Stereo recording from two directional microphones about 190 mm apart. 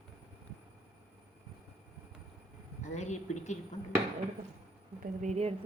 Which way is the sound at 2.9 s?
35° left (ahead or behind).